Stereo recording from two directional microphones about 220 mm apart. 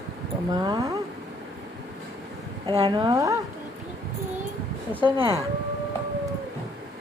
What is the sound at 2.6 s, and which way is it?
Speech, 20° right (ahead or behind).